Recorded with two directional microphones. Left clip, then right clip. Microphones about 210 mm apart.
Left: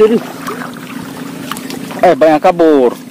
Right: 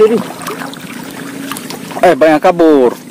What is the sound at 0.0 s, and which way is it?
Speech, 20° right (ahead or behind).